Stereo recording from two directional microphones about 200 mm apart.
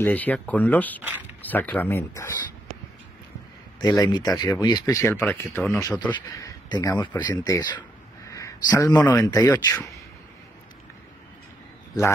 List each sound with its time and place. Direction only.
0.0 s speech: 10° left (ahead or behind)
3.8 s a man's voice: 20° left (ahead or behind)